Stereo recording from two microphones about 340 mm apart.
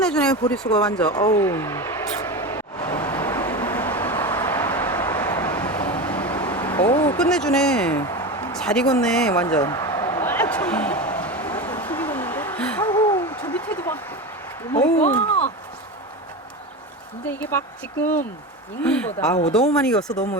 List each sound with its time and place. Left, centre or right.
0.0 s speech: centre
0.9 s vehicle: centre
14.7 s speech: centre
18.0 s speech: left
18.8 s speech: centre